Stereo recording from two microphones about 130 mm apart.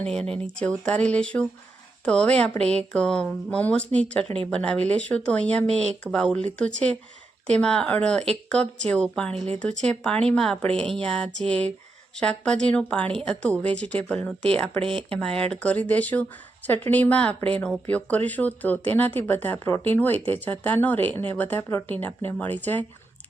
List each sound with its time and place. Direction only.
0.0 s speech: 5° left (ahead or behind)
9.3 s speech: 55° right (ahead or behind)
9.6 s speech: 10° left (ahead or behind)
14.8 s speech: 45° right (ahead or behind)
15.2 s speech: 5° left (ahead or behind)